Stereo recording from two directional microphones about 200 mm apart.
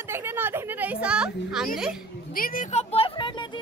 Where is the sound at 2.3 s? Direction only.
45° left (ahead or behind); by 3.6 s 25° left (ahead or behind).